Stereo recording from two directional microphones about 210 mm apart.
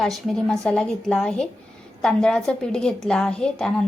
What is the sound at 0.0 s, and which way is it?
A woman's voice, centre (ahead or behind).